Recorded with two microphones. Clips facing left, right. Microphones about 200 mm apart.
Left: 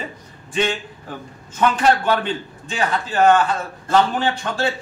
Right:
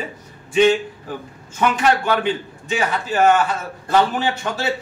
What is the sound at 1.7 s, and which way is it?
A man's voice, 10° right (ahead or behind).